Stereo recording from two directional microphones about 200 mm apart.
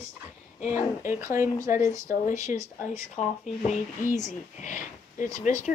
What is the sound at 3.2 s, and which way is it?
Speech, 35° left (ahead or behind).